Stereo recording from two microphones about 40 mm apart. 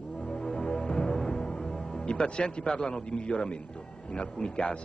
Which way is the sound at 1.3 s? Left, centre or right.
Left.